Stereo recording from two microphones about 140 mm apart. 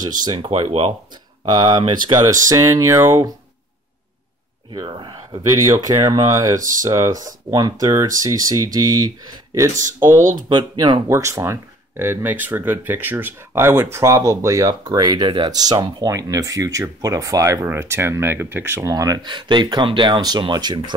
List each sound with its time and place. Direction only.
0.0 s speech: 30° right (ahead or behind); by 0.9 s 45° right (ahead or behind)
1.5 s speech: 30° right (ahead or behind)
2.4 s speech: 20° right (ahead or behind)
4.6 s speech: 35° right (ahead or behind)
5.5 s speech: 25° right (ahead or behind)
10.5 s speech: 35° right (ahead or behind)
11.1 s speech: 20° right (ahead or behind)